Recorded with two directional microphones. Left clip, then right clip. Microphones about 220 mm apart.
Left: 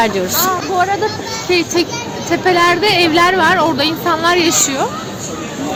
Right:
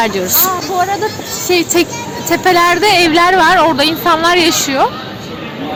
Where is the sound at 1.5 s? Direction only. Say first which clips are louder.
Right 3 dB; 45° right (ahead or behind).